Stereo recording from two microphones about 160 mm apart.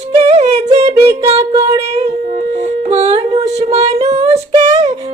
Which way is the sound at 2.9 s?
40° right (ahead or behind).